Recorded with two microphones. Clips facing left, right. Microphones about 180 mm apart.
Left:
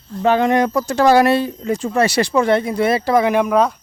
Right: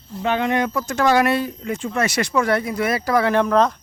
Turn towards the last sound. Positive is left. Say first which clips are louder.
# left 2 dB
turn(degrees=10)  # may be behind; listen again after turning